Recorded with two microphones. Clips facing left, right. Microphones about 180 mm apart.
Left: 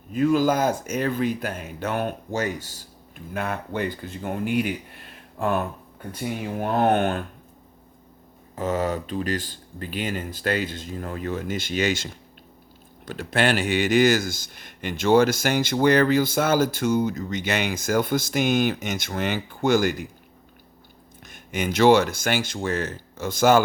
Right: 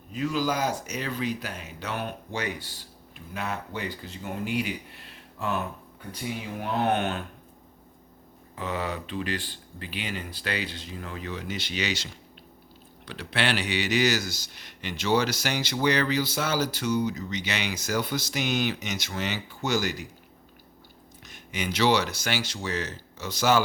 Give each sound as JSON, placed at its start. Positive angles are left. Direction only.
{"t": 0.1, "sound": "speech", "side_deg": 50}
{"t": 8.5, "sound": "speech", "side_deg": 45}
{"t": 21.2, "sound": "speech", "side_deg": 50}